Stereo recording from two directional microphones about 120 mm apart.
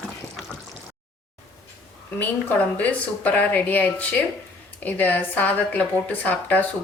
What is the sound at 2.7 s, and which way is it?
A woman's voice, 10° left (ahead or behind).